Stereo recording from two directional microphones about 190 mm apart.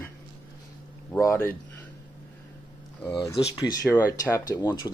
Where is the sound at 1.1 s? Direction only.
15° left (ahead or behind).